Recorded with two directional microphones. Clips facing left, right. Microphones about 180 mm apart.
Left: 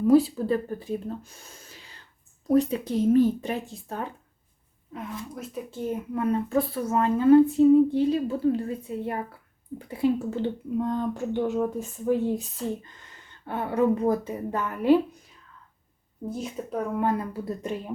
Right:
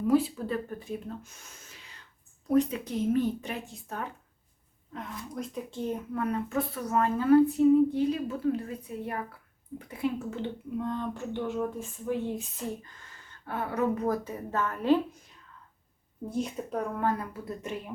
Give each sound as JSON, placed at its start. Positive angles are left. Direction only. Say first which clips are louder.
{"t": 0.1, "sound": "speech", "louder": "left 6 dB", "side_deg": 35}
{"t": 4.9, "sound": "speech", "louder": "left 2 dB", "side_deg": 5}
{"t": 6.5, "sound": "a woman's voice", "louder": "left 4 dB", "side_deg": 35}
{"t": 13.5, "sound": "a woman's voice", "louder": "left 5 dB", "side_deg": 25}
{"t": 16.3, "sound": "speech", "louder": "even", "side_deg": 0}
{"t": 17.0, "sound": "a woman's voice", "louder": "left 4 dB", "side_deg": 20}